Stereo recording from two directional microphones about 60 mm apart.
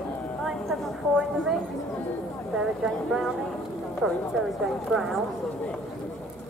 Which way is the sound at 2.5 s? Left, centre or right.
Centre.